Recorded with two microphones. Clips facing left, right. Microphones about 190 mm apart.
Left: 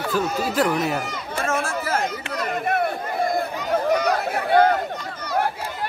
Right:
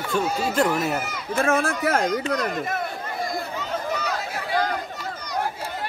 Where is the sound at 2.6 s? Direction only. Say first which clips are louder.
Left 6 dB; 60° left (ahead or behind).